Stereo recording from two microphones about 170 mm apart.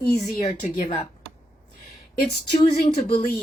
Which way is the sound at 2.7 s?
60° left (ahead or behind).